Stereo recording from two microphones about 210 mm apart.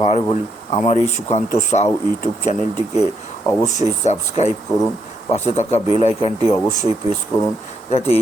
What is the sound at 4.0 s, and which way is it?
Speech, 35° left (ahead or behind).